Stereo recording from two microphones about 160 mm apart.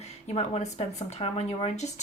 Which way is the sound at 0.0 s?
40° left (ahead or behind).